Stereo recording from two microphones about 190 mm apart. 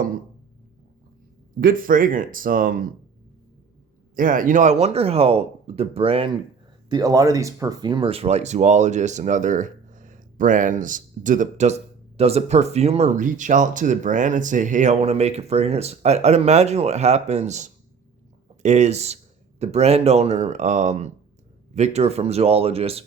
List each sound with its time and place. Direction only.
1.6 s speech: 45° right (ahead or behind)
4.1 s speech: 45° right (ahead or behind); by 6.3 s 30° right (ahead or behind)
6.9 s speech: 20° right (ahead or behind)